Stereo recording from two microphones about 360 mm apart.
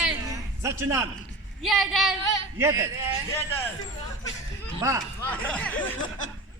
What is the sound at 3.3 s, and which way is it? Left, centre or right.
Speech, centre.